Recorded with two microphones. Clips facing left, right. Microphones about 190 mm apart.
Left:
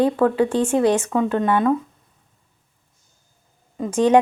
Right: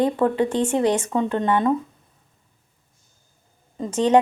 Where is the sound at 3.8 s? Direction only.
10° left (ahead or behind).